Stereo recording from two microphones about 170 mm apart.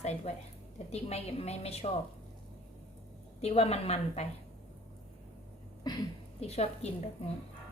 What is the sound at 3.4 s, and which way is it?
Speech, 35° left (ahead or behind).